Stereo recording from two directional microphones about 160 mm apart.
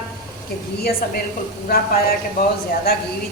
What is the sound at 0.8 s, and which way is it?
A woman's voice, 75° left (ahead or behind).